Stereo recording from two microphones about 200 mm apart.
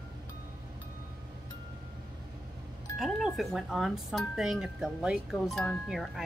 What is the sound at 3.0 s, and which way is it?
Speech, centre (ahead or behind).